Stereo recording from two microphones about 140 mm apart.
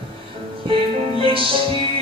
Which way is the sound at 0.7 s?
40° right (ahead or behind).